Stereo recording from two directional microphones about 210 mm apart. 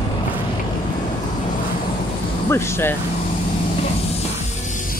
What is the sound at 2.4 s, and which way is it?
Speech, 10° left (ahead or behind).